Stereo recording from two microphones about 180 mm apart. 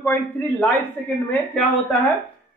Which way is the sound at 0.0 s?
10° left (ahead or behind).